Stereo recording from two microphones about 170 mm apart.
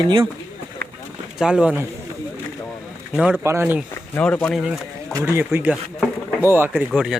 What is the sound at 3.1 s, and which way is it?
Speech, 5° right (ahead or behind).